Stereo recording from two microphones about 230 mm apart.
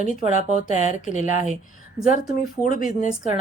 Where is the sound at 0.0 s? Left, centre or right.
Left.